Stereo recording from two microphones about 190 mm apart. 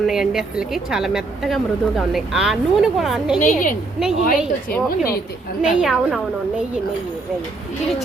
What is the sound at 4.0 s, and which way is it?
Speech, centre (ahead or behind).